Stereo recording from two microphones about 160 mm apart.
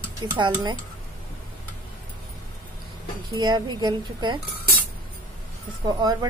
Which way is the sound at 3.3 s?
25° right (ahead or behind).